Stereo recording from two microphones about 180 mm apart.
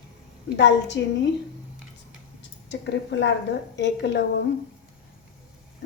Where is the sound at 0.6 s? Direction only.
80° left.